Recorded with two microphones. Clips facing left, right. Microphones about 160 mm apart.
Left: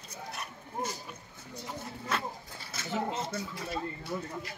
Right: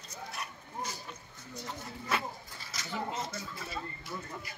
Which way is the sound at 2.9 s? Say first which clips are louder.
Left 4 dB; 30° left (ahead or behind).